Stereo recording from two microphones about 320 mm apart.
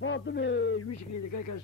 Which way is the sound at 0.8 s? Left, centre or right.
Left.